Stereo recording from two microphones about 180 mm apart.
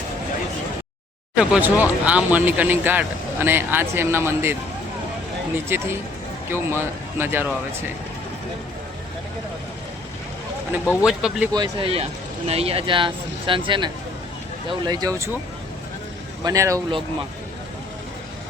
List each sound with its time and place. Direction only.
1.4 s speech: 10° right (ahead or behind)
5.6 s speech: 15° right (ahead or behind)
10.8 s speech: 5° right (ahead or behind)
11.5 s speech: 25° right (ahead or behind)
16.4 s speech: 20° right (ahead or behind)